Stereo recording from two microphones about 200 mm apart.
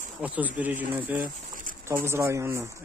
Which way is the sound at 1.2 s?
45° right (ahead or behind).